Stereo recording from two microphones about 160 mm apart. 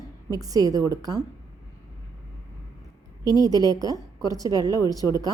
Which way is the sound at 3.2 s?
25° left (ahead or behind).